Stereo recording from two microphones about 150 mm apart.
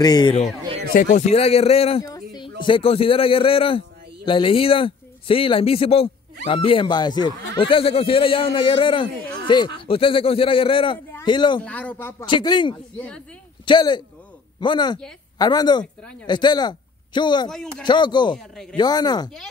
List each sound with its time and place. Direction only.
0.0 s a woman's voice: 25° left (ahead or behind)
0.9 s speech: 50° left (ahead or behind)
2.0 s a sound: 25° left (ahead or behind)
2.6 s speech: 35° left (ahead or behind)
11.6 s a man's voice: 10° left (ahead or behind)
12.3 s a woman's voice: 30° left (ahead or behind)
18.3 s speech: 5° left (ahead or behind)
18.8 s a woman's voice: 25° left (ahead or behind)